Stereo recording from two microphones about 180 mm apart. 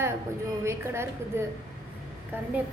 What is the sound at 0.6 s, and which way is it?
Speech, 15° right (ahead or behind).